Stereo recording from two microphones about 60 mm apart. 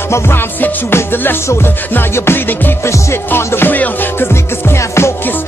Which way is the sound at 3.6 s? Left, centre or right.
Left.